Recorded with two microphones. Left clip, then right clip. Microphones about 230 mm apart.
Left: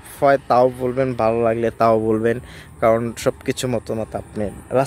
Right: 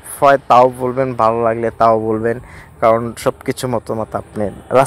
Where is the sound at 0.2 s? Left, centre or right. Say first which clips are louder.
Right 5 dB; centre.